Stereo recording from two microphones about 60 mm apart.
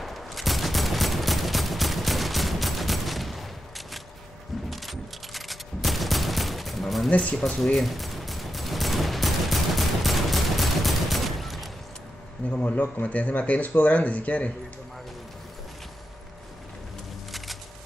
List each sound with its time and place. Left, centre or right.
0.0 s fusillade: centre
7.1 s speech: left
7.4 s fusillade: centre
12.4 s speech: left